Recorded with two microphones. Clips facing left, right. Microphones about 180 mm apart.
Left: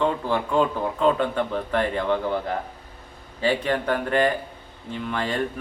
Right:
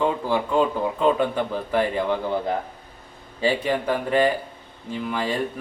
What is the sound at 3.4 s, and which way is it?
Speech, 10° right (ahead or behind).